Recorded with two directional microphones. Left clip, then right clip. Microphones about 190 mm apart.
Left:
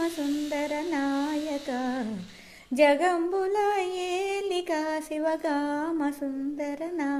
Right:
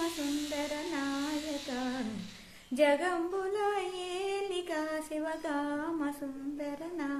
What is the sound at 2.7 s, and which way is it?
Singing, 35° left (ahead or behind).